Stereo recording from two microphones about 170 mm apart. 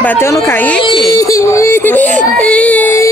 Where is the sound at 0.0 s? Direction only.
10° left (ahead or behind).